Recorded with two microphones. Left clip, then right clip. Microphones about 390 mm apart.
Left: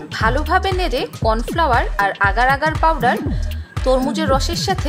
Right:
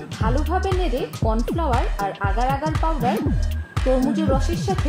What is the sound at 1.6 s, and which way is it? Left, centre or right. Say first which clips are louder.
Speech: left 10 dB; left.